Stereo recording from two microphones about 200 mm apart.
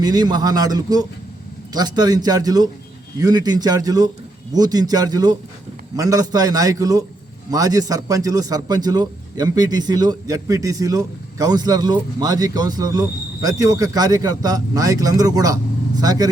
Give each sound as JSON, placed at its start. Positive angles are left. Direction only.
{"t": 0.0, "sound": "a man's voice", "side_deg": -20}